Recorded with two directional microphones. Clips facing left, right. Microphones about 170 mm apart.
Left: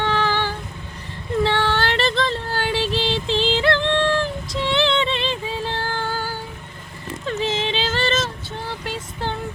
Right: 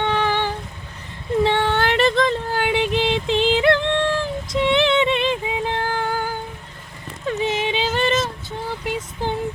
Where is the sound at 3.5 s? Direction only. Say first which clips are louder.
Right 3 dB; 20° right (ahead or behind).